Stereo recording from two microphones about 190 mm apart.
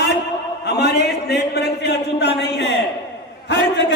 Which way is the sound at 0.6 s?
60° left (ahead or behind).